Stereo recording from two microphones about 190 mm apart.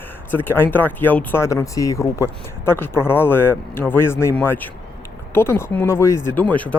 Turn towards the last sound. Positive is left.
turn(degrees=10)  # may be behind; listen again after turning